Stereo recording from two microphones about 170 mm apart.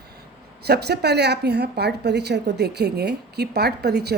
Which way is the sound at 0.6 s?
75° right (ahead or behind).